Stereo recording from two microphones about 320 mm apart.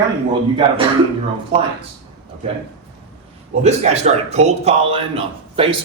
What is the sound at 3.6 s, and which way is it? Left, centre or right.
A man's voice, right.